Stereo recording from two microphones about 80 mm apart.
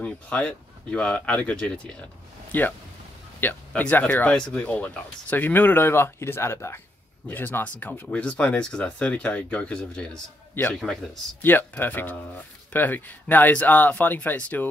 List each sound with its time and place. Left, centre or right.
0.0 s speech: centre
3.3 s a man's voice: left; by 11.0 s centre
11.5 s speech: left